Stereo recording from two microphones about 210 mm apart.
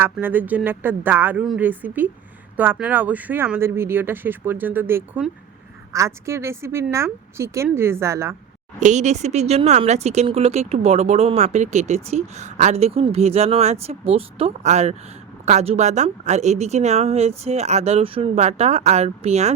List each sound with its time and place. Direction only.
0.0 s speech: 10° right (ahead or behind)
8.8 s speech: 35° right (ahead or behind)